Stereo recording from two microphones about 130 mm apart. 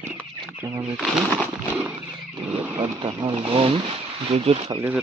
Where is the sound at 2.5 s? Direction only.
15° right (ahead or behind).